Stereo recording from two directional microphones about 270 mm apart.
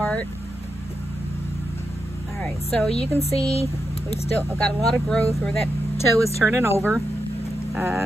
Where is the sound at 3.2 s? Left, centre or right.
Left.